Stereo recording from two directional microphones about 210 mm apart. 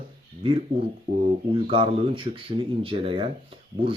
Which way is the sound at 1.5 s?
25° right (ahead or behind).